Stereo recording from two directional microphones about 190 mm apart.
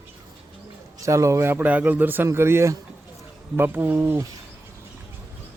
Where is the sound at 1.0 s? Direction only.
15° right (ahead or behind).